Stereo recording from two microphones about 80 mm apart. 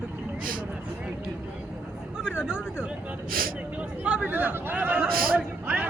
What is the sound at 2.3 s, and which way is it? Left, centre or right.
Speech, centre.